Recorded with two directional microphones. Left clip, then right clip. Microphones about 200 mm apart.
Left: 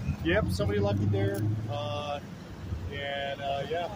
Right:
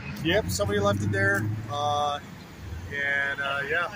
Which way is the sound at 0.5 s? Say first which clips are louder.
Right 5 dB; 35° right (ahead or behind).